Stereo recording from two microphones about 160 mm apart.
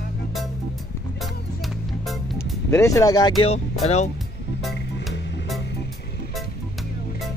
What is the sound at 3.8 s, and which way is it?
Speech, 45° left (ahead or behind).